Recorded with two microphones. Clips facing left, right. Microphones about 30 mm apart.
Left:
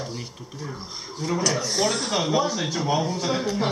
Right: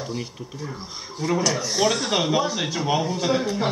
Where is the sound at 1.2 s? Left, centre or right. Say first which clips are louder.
Right 2 dB; centre.